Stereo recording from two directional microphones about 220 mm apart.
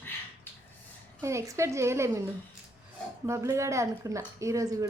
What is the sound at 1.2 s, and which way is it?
A woman's voice, 15° right (ahead or behind).